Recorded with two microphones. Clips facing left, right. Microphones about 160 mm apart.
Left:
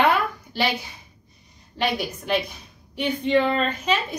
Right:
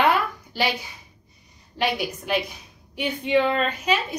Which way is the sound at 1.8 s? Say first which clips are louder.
Even; 10° right (ahead or behind).